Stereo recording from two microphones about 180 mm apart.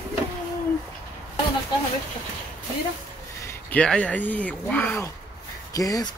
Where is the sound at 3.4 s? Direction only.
5° left (ahead or behind).